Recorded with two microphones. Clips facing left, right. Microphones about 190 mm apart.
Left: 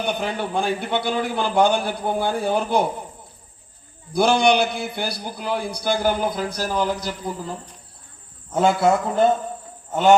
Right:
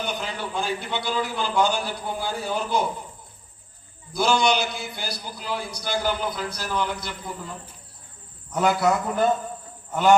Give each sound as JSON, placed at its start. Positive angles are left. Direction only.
{"t": 0.0, "sound": "a man's voice", "side_deg": 60}
{"t": 4.1, "sound": "a man's voice", "side_deg": 55}
{"t": 8.5, "sound": "a man's voice", "side_deg": 25}